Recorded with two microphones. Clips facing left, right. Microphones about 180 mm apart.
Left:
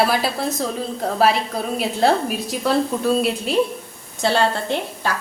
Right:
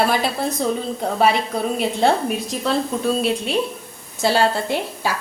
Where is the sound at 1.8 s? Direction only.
Centre (ahead or behind).